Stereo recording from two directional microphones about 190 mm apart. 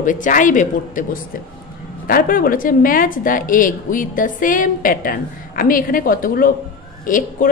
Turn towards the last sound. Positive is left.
turn(degrees=45)  # may be behind; listen again after turning